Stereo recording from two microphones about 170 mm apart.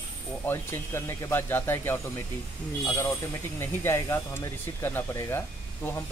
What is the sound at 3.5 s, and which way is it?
Speech, 15° left (ahead or behind).